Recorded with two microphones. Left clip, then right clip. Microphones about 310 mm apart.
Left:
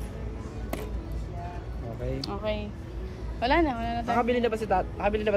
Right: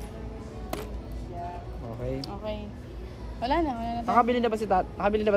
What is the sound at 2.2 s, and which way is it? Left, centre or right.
Speech, centre.